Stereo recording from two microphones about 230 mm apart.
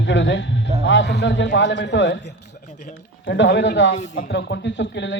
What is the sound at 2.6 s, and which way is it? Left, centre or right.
Speech, left.